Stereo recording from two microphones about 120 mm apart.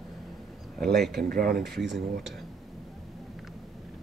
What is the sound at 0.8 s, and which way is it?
Speech, centre (ahead or behind).